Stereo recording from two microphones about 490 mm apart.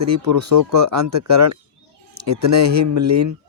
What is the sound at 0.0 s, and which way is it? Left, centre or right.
Speech, right.